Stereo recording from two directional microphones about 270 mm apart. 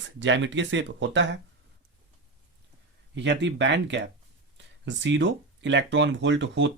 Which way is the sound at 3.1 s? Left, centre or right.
Right.